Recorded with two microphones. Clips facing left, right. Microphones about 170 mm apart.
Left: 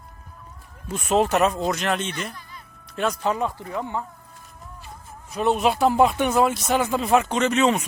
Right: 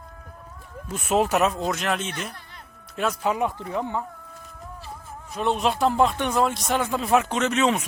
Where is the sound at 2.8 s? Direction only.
5° right (ahead or behind).